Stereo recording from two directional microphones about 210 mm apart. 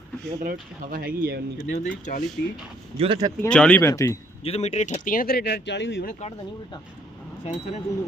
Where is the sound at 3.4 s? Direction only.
5° left (ahead or behind).